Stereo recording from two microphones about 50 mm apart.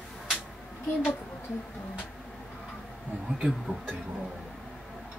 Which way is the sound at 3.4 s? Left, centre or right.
Centre.